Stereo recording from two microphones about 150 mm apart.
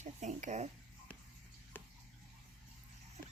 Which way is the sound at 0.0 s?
50° right (ahead or behind).